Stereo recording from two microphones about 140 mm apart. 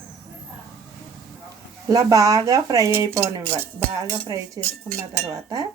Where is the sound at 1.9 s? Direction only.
25° right (ahead or behind).